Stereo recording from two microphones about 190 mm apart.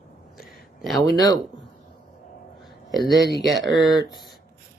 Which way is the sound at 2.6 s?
Centre (ahead or behind).